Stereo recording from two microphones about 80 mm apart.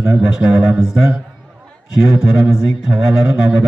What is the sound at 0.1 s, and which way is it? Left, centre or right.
A man's voice, centre.